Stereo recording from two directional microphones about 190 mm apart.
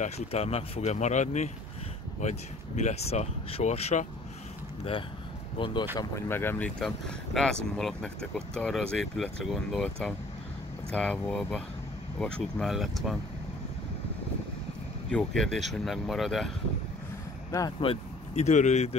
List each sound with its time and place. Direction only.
0.0 s speech: 30° left (ahead or behind)
5.6 s speech: 25° left (ahead or behind)
5.9 s speech: 15° left (ahead or behind)
15.0 s speech: 5° left (ahead or behind)
17.5 s speech: 20° left (ahead or behind); by 18.9 s 35° left (ahead or behind)